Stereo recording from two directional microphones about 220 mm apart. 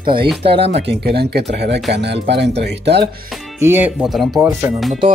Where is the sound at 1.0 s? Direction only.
45° right (ahead or behind).